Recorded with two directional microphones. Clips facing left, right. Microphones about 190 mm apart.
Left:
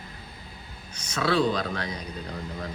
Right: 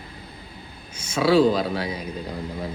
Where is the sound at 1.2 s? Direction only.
10° right (ahead or behind).